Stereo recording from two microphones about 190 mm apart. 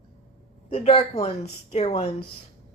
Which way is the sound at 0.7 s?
30° left (ahead or behind).